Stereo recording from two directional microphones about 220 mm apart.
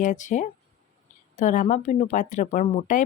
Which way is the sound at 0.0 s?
35° left (ahead or behind).